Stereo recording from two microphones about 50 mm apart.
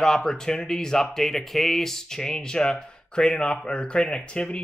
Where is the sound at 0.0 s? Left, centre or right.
Centre.